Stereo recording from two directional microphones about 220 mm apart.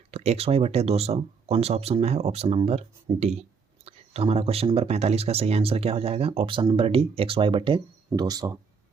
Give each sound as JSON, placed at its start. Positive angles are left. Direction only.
{"t": 0.1, "sound": "speech", "side_deg": -30}